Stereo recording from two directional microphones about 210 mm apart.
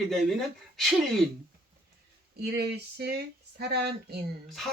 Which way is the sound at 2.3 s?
50° right (ahead or behind).